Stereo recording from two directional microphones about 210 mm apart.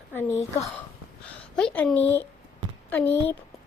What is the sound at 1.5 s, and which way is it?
A woman's voice, 5° left (ahead or behind).